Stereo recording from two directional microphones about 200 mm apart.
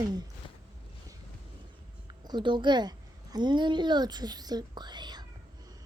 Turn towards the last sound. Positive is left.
turn(degrees=-20)  # may be behind; listen again after turning